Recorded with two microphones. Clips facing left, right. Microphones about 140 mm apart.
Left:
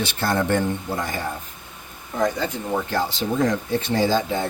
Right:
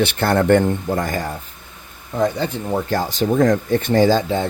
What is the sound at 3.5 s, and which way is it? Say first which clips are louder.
Speech: right 5 dB; 50° right (ahead or behind).